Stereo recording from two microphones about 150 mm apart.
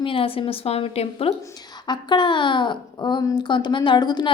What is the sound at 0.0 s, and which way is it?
Speech, 35° left (ahead or behind).